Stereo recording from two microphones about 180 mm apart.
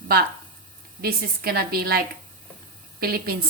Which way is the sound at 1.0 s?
60° right (ahead or behind).